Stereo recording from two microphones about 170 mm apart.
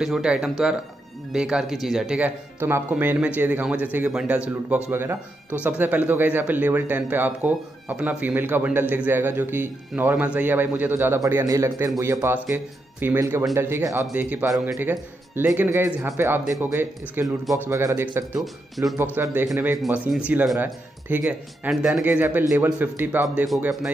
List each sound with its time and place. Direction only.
0.0 s speech: 5° right (ahead or behind)
19.8 s speech: centre (ahead or behind)
23.2 s speech: centre (ahead or behind)